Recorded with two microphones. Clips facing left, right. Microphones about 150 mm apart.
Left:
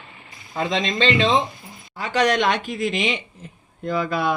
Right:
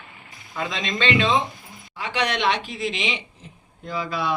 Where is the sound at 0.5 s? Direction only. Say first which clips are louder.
Left 5 dB; 35° left (ahead or behind).